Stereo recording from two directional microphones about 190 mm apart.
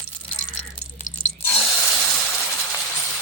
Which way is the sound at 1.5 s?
Centre (ahead or behind).